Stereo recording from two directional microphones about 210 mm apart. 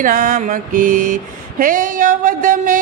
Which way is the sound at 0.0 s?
40° right (ahead or behind).